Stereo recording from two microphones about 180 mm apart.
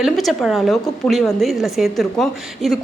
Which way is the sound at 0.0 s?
Centre (ahead or behind).